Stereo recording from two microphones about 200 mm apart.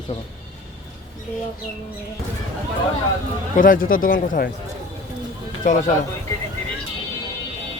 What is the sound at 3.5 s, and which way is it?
Speech, 40° left (ahead or behind).